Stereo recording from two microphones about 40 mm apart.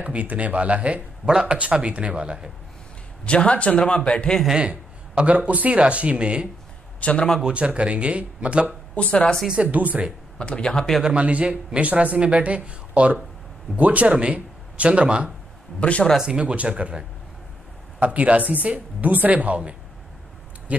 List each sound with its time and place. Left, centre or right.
0.0 s a man's voice: right
3.3 s speech: left
4.6 s a man's voice: right
7.0 s a man's voice: left
7.4 s a man's voice: right
8.9 s speech: left
9.7 s a man's voice: right
10.4 s speech: left
11.1 s a man's voice: right
15.8 s speech: left
16.2 s speech: right
17.9 s a man's voice: right